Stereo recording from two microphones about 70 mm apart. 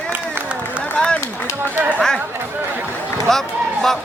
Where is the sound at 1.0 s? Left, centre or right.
Centre.